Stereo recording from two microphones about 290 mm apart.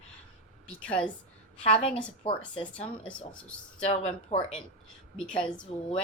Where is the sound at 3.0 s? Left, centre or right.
Centre.